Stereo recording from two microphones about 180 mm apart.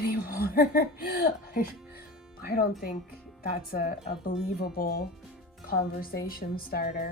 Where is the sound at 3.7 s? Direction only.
55° left (ahead or behind).